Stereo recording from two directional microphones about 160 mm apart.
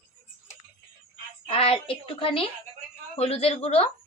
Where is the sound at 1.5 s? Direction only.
35° left (ahead or behind).